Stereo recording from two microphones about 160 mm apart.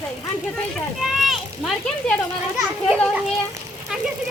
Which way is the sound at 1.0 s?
Centre (ahead or behind).